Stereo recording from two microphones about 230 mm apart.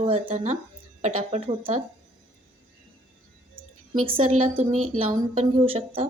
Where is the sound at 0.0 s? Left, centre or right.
Right.